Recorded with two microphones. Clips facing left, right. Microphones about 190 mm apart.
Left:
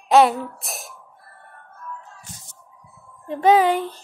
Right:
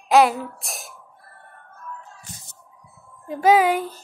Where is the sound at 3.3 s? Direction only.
Centre (ahead or behind).